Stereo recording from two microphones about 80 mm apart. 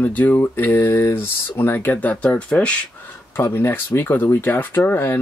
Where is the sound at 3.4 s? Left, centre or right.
Left.